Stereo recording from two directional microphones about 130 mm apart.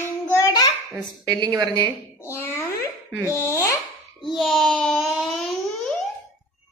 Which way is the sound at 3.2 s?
20° left (ahead or behind).